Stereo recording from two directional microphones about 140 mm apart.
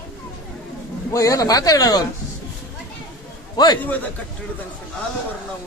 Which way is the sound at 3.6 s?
30° left (ahead or behind).